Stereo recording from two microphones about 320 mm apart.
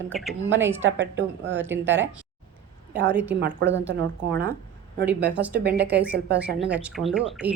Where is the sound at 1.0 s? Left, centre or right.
Right.